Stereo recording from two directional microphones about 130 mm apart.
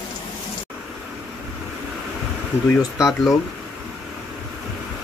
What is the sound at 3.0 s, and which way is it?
Speech, centre (ahead or behind).